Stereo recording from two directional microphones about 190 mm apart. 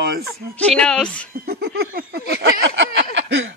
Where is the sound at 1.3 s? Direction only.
50° right (ahead or behind); by 3.5 s 75° right (ahead or behind).